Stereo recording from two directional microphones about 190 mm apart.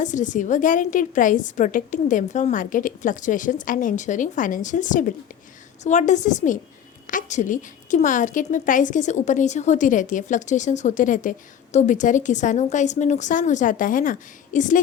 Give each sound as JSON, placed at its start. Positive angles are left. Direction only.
{"t": 0.0, "sound": "a woman's voice", "side_deg": 40}